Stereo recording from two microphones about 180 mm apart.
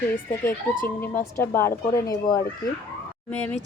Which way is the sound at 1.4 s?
15° left (ahead or behind).